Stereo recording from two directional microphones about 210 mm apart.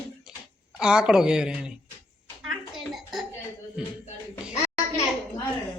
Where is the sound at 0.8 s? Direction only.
5° right (ahead or behind).